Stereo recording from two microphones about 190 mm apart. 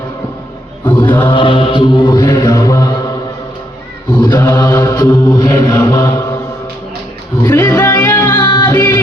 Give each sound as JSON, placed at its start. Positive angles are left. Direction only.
{"t": 0.9, "sound": "mantra", "side_deg": 10}
{"t": 1.3, "sound": "mantra", "side_deg": 25}
{"t": 4.2, "sound": "mantra", "side_deg": 20}
{"t": 5.2, "sound": "chant", "side_deg": 10}
{"t": 5.8, "sound": "mantra", "side_deg": 15}
{"t": 7.4, "sound": "music", "side_deg": 15}